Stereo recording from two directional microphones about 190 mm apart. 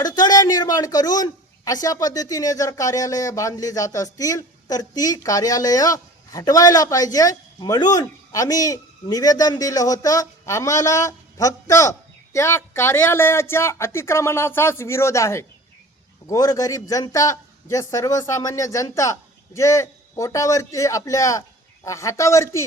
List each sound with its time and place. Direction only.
0.0 s a man's voice: 20° left (ahead or behind)